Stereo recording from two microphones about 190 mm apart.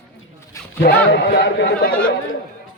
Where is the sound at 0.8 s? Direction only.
60° left (ahead or behind).